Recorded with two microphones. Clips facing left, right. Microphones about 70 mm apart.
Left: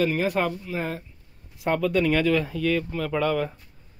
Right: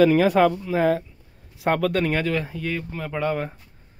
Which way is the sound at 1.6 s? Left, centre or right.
Right.